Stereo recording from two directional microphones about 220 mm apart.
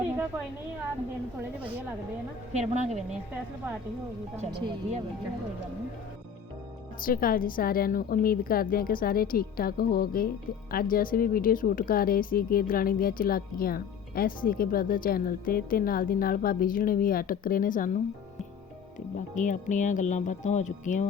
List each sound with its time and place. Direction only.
2.5 s a woman's voice: 30° right (ahead or behind)
4.4 s speech: 25° right (ahead or behind)
7.0 s a woman's voice: 40° left (ahead or behind)
19.1 s a woman's voice: 35° left (ahead or behind)